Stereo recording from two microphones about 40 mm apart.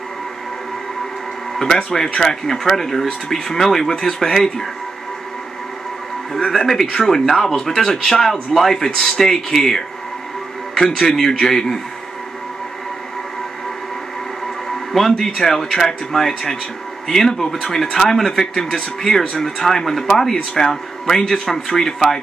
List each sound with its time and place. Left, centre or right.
2.0 s speech: centre
6.3 s speech: centre
14.7 s speech: centre
21.1 s speech: centre
21.5 s speech: centre